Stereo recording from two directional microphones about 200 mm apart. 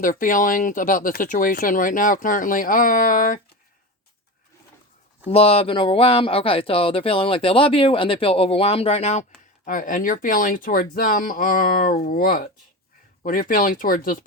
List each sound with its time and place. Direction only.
0.0 s speech: 40° left (ahead or behind)
5.3 s speech: 30° left (ahead or behind); by 14.3 s 45° left (ahead or behind)